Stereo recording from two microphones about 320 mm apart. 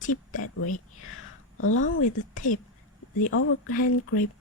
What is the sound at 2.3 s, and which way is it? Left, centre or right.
Speech, left.